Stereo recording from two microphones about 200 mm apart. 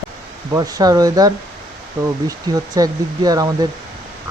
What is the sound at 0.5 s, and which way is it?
Speech, 20° right (ahead or behind).